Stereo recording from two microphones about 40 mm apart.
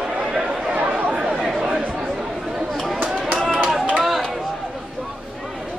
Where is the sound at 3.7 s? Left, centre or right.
Centre.